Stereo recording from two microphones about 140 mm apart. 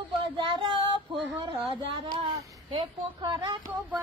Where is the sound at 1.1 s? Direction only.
35° right (ahead or behind).